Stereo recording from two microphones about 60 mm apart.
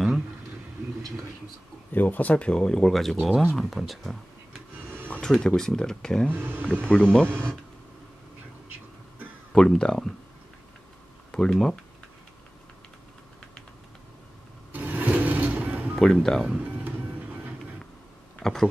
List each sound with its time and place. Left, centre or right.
1.9 s speech: left; by 2.9 s centre
2.9 s speech: centre
5.2 s speech: centre
6.3 s speech: right
6.9 s speech: centre
9.5 s speech: centre
11.3 s speech: centre
14.7 s music: right
16.0 s speech: centre
18.4 s speech: centre